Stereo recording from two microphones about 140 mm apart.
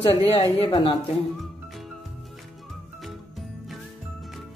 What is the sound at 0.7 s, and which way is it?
Speech, 30° left (ahead or behind).